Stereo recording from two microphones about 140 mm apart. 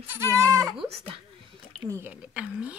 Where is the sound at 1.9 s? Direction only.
20° right (ahead or behind).